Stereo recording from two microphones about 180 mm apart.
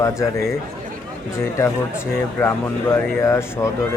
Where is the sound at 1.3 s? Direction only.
15° left (ahead or behind).